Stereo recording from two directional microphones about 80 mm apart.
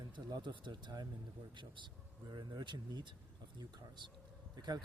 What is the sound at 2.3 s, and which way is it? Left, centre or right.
Speech, right.